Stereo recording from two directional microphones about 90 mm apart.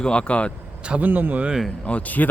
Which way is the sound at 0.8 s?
15° right (ahead or behind).